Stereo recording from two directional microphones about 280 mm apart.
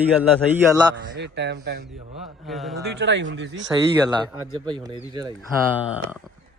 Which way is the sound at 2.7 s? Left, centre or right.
Right.